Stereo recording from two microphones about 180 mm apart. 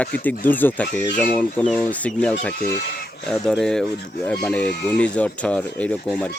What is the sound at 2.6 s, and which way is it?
Speech, 60° left (ahead or behind).